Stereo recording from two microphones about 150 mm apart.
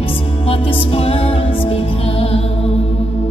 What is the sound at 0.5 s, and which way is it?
Music, 40° left (ahead or behind).